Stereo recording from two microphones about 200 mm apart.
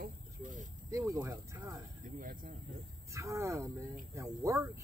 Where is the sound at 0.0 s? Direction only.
40° right (ahead or behind).